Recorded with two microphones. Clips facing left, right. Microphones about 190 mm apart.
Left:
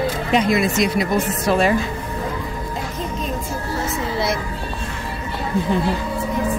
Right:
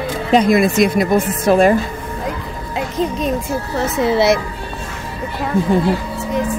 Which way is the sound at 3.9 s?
75° right (ahead or behind).